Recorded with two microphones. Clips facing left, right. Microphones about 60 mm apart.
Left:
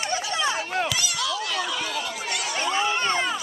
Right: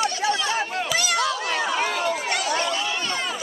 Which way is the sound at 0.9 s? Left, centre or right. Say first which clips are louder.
Right 5 dB; right.